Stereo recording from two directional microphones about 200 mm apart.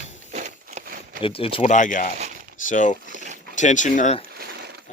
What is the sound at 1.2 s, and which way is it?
Speech, 25° left (ahead or behind).